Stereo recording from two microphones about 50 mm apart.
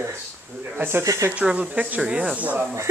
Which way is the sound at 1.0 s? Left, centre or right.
Right.